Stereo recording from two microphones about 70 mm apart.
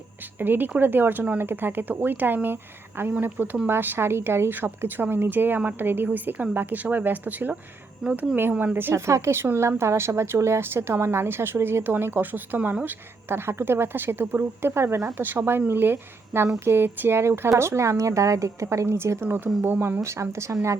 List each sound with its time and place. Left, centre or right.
0.3 s speech: right
8.0 s speech: centre
8.4 s a woman's voice: right
19.6 s speech: right
20.0 s a woman's voice: right